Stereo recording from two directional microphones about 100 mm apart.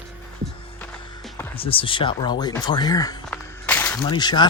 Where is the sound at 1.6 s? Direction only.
65° left (ahead or behind); by 3.1 s 40° left (ahead or behind).